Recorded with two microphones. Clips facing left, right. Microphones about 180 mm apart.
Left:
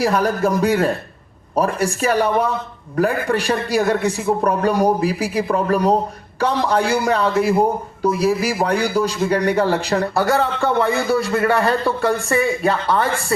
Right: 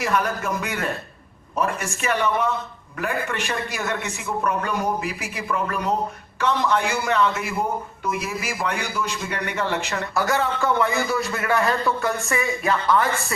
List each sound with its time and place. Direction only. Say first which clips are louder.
0.0 s a man's voice: left 6 dB; 35° left (ahead or behind)